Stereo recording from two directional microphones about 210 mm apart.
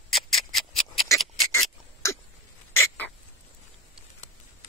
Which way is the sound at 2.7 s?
10° left (ahead or behind).